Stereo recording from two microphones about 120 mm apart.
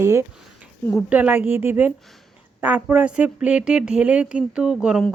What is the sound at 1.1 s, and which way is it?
Speech, 10° right (ahead or behind).